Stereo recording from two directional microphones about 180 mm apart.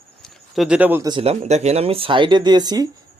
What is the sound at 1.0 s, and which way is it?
Speech, 30° right (ahead or behind).